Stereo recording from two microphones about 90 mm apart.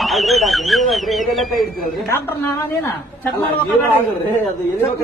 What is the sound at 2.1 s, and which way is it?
A woman's voice, 25° left (ahead or behind).